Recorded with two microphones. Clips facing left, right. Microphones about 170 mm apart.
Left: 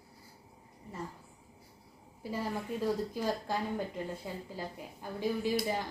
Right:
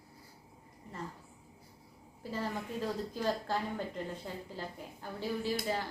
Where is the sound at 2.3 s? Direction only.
10° left (ahead or behind).